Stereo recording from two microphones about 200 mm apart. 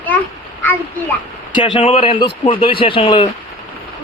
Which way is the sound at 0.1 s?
10° left (ahead or behind).